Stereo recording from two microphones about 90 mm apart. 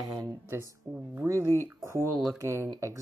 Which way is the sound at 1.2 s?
30° right (ahead or behind).